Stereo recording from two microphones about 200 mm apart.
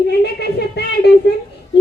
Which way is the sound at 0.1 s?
55° left (ahead or behind).